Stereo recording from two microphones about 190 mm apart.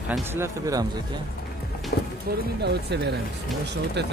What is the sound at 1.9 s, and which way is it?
Music, 60° left (ahead or behind).